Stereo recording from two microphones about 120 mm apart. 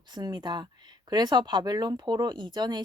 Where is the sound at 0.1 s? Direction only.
35° right (ahead or behind).